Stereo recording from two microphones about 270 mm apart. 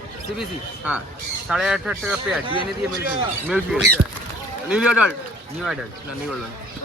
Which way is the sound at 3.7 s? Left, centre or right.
Centre.